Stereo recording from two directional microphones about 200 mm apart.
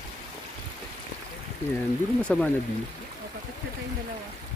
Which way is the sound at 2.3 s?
5° left (ahead or behind).